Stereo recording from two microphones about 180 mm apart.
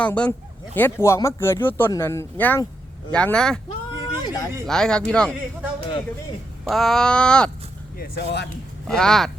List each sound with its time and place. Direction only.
0.0 s speech: 10° left (ahead or behind)
3.9 s a sound: 20° left (ahead or behind)
4.6 s speech: 5° left (ahead or behind)
6.7 s speech: centre (ahead or behind)
7.9 s speech: 65° left (ahead or behind)
8.9 s speech: 5° left (ahead or behind)